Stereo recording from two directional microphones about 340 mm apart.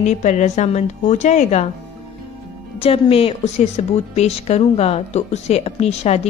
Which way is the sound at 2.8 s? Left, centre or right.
Centre.